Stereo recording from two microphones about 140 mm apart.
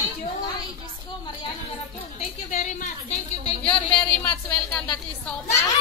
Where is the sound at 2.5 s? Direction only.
65° left (ahead or behind).